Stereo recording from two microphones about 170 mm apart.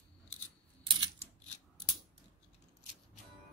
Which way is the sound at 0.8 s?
25° right (ahead or behind).